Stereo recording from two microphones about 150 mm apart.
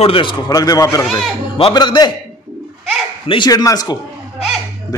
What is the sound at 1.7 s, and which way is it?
Speech, 30° left (ahead or behind).